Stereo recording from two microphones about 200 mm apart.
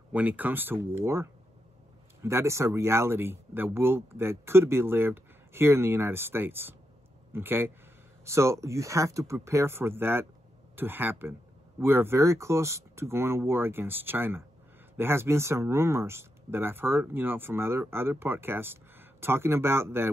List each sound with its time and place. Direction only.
0.1 s speech: 10° right (ahead or behind)